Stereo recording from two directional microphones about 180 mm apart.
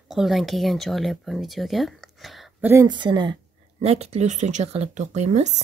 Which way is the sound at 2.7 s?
20° right (ahead or behind).